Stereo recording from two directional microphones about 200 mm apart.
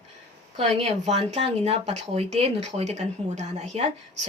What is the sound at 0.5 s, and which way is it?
Speech, 35° right (ahead or behind).